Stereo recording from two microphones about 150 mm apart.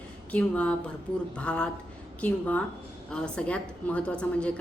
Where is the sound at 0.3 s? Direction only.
10° left (ahead or behind).